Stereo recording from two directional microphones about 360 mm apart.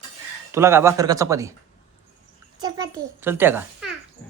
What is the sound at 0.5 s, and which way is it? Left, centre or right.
A child's voice, centre.